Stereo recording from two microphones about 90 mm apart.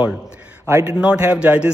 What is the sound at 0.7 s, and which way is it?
Speech, 30° right (ahead or behind).